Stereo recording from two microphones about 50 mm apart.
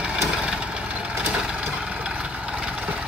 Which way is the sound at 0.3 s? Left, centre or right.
Centre.